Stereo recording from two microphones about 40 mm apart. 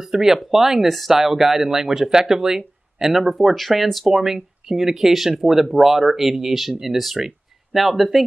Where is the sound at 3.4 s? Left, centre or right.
Centre.